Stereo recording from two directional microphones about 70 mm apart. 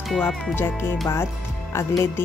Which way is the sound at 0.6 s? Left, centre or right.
Left.